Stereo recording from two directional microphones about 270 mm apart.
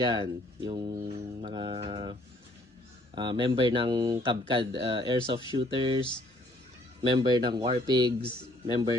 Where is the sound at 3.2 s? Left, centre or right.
Centre.